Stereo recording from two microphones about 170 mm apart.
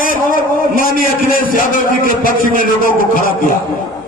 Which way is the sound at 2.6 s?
55° left (ahead or behind).